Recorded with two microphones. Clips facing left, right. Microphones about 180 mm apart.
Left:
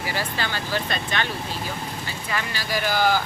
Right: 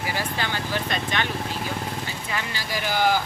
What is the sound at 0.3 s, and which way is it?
Speech, 15° right (ahead or behind).